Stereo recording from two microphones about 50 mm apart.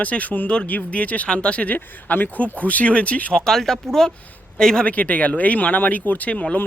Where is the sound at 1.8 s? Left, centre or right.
Left.